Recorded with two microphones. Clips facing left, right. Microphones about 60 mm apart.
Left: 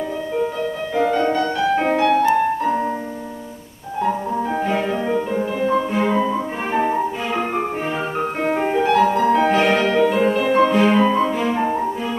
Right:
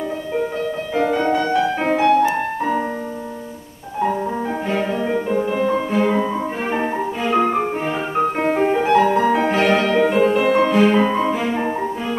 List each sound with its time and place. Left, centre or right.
0.9 s music: centre
4.7 s music: centre
8.7 s music: centre
9.6 s music: centre
11.0 s music: centre